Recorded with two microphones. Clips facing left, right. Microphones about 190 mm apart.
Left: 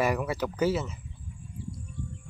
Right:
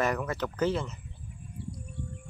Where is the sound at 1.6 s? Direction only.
65° right (ahead or behind).